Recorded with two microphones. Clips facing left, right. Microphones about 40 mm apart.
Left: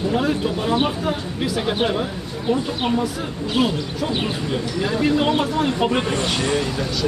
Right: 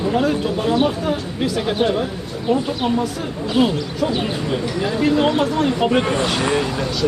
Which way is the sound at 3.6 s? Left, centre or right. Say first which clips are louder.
Right 4 dB; centre.